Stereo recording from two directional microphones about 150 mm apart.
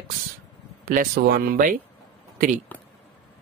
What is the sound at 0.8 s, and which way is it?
Speech, 70° right (ahead or behind).